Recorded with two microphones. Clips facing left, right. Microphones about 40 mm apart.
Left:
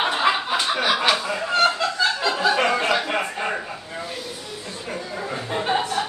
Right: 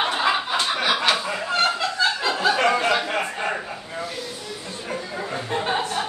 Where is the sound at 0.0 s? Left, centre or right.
Centre.